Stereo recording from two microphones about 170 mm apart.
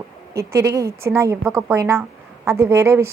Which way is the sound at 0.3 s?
15° right (ahead or behind).